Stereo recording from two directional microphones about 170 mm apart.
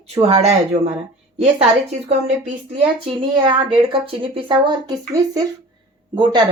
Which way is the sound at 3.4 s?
30° right (ahead or behind).